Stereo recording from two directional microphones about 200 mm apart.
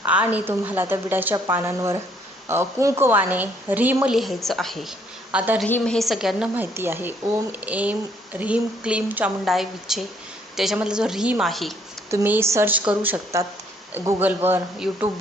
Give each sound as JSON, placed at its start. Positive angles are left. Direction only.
{"t": 0.0, "sound": "a woman's voice", "side_deg": -5}
{"t": 5.6, "sound": "a woman's voice", "side_deg": 5}
{"t": 12.1, "sound": "speech", "side_deg": -10}